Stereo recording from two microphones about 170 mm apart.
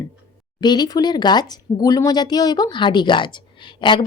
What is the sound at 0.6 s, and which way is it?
Speech, 25° left (ahead or behind).